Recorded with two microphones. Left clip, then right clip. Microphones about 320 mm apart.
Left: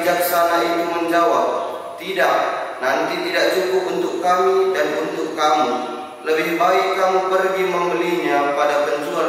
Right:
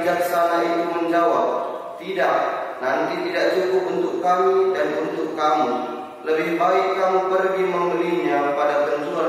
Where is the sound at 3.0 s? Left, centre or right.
Centre.